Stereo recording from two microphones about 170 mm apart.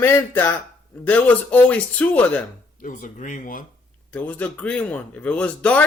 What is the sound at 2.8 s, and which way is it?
Speech, 50° left (ahead or behind).